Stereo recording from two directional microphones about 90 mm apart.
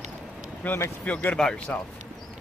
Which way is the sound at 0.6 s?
20° left (ahead or behind).